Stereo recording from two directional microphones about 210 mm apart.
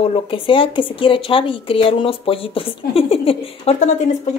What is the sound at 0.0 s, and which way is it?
Speech, 25° left (ahead or behind).